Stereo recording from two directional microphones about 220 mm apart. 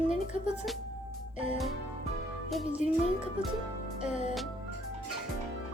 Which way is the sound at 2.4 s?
Centre (ahead or behind).